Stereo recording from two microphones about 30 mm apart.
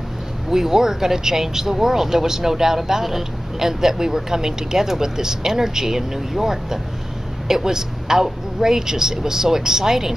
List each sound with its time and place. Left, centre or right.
0.5 s speech: centre